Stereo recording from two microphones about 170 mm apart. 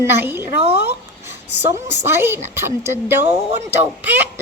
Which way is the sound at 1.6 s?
15° right (ahead or behind).